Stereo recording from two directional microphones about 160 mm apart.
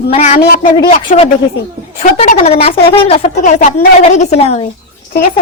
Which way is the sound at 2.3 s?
45° left (ahead or behind).